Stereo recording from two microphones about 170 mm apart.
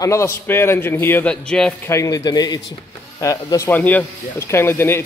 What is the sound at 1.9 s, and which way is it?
A man's voice, 20° left (ahead or behind).